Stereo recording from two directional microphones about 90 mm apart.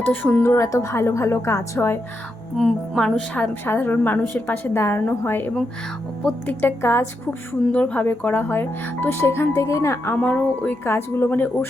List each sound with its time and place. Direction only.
0.0 s speech: 20° left (ahead or behind)
0.4 s speech: 35° left (ahead or behind)
2.6 s music: 5° right (ahead or behind)
3.0 s a woman's voice: 15° left (ahead or behind)
4.7 s speech: 30° left (ahead or behind)
6.5 s speech: 20° left (ahead or behind)
7.7 s speech: 15° left (ahead or behind); by 10.2 s 30° left (ahead or behind)
10.2 s a woman's voice: 15° left (ahead or behind)
10.8 s speech: 25° left (ahead or behind)